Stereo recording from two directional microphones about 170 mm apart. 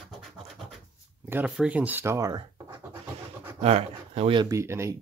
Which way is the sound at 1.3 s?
10° right (ahead or behind).